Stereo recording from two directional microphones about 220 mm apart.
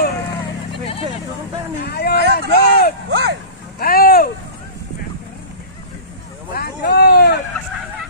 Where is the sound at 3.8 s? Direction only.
40° left (ahead or behind).